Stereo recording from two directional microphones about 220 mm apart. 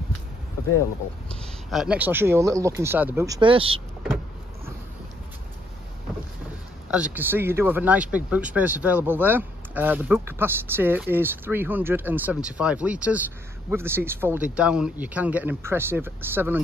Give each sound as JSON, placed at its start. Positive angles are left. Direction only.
{"t": 1.7, "sound": "speech", "side_deg": -5}
{"t": 6.9, "sound": "speech", "side_deg": -5}